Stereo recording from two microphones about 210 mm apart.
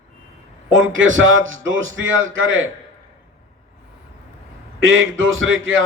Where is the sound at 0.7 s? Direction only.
70° right (ahead or behind).